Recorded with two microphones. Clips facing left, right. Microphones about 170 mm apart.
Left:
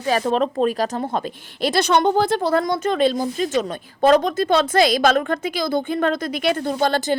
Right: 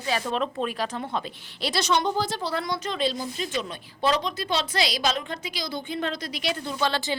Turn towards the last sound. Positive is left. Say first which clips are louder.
# left 7 dB
turn(degrees=45)  # may be behind; listen again after turning